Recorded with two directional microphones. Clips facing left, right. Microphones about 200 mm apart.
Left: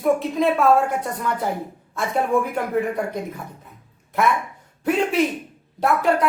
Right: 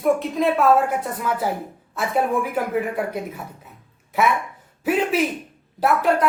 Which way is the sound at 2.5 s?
5° right (ahead or behind).